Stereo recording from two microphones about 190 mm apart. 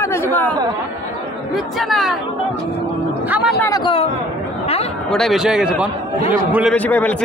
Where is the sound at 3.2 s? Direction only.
10° right (ahead or behind).